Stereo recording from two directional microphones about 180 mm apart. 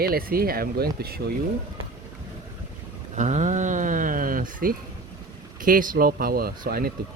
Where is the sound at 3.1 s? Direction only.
40° right (ahead or behind).